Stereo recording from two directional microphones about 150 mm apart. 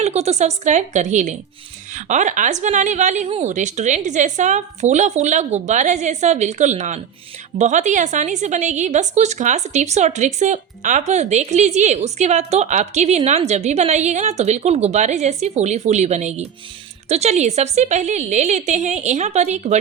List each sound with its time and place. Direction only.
0.0 s a woman's voice: 45° right (ahead or behind)